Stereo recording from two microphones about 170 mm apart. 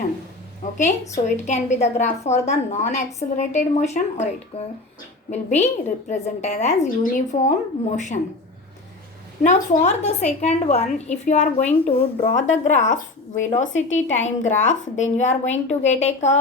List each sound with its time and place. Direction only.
0.8 s a woman's voice: 45° left (ahead or behind)
9.4 s a woman's voice: 45° left (ahead or behind)